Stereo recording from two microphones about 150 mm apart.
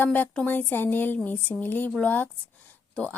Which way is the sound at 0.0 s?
10° left (ahead or behind).